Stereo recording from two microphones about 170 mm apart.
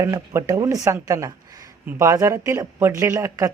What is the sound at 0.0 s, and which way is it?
Speech, 20° right (ahead or behind).